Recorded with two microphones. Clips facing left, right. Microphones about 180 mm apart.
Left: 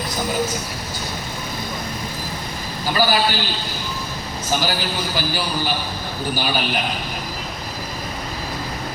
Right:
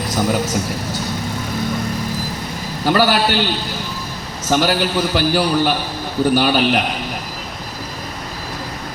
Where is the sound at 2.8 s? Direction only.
65° right (ahead or behind).